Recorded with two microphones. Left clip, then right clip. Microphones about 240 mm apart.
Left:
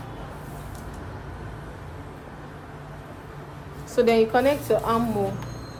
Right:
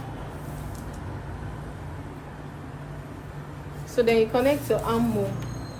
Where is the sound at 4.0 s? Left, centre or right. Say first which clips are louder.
Left 2 dB; left.